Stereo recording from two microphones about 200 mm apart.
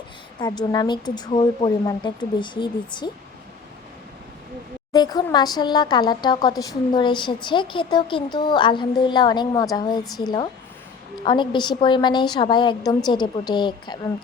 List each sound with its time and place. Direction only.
0.3 s a woman's voice: 20° left (ahead or behind)
4.9 s a woman's voice: 20° left (ahead or behind)